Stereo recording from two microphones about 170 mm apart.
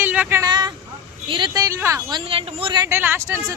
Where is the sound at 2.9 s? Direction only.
15° right (ahead or behind).